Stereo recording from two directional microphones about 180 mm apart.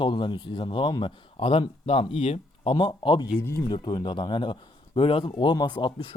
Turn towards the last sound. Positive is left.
turn(degrees=30)  # may be behind; listen again after turning